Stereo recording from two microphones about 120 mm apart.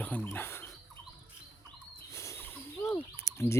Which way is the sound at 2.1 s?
25° left (ahead or behind).